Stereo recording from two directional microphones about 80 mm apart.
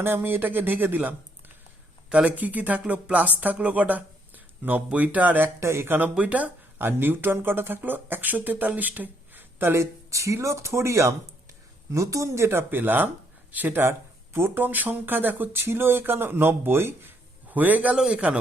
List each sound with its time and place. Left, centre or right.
0.0 s speech: right
5.5 s speech: right; by 18.3 s centre